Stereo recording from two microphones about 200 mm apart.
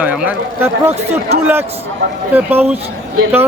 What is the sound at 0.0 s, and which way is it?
Speech, 5° right (ahead or behind).